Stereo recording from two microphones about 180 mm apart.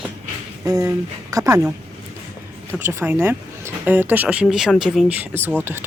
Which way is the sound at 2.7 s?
10° right (ahead or behind).